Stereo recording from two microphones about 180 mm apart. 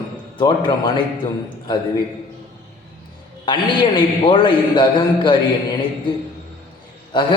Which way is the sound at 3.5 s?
25° left (ahead or behind).